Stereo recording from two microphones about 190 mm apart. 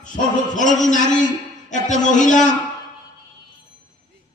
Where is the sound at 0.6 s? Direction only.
40° left (ahead or behind).